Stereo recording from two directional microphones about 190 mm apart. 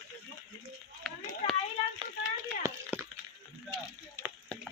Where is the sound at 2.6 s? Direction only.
15° right (ahead or behind).